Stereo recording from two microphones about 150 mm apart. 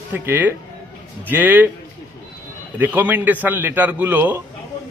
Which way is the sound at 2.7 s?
10° right (ahead or behind).